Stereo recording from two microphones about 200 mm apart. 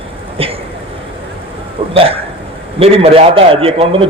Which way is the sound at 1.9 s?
30° right (ahead or behind).